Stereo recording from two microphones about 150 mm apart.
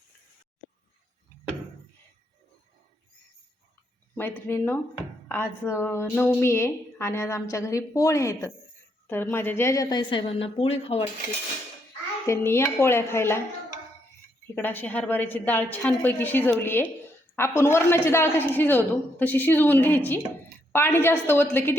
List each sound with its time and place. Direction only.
4.1 s a woman's voice: 15° left (ahead or behind); by 11.0 s 40° left (ahead or behind)
12.2 s a woman's voice: 20° left (ahead or behind)
14.5 s a woman's voice: 15° left (ahead or behind)